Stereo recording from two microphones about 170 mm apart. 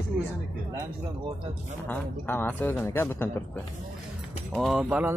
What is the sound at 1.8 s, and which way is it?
Speech, 10° left (ahead or behind).